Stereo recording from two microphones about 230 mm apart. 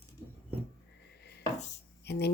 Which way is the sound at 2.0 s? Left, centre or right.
Left.